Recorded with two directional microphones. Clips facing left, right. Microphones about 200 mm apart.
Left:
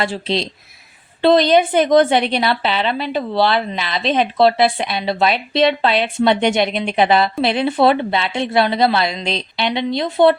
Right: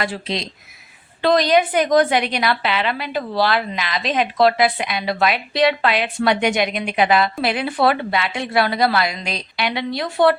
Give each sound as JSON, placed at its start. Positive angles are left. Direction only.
{"t": 0.0, "sound": "a woman's voice", "side_deg": 30}